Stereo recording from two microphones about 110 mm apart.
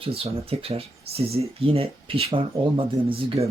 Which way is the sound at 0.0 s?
60° right (ahead or behind).